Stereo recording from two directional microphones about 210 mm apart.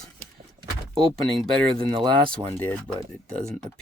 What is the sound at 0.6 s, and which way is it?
Power windows, 25° right (ahead or behind).